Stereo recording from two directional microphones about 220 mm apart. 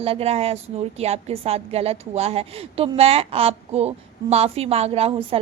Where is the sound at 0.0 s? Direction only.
25° right (ahead or behind).